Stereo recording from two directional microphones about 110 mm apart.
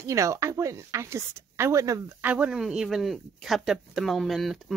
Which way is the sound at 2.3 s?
10° right (ahead or behind).